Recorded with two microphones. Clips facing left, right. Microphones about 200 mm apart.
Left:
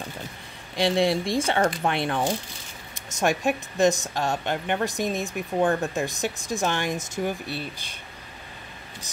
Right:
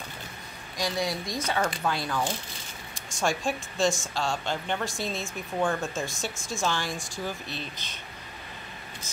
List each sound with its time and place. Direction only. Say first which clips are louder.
0.7 s speech: left 8 dB; 25° left (ahead or behind); by 7.7 s 10° left (ahead or behind)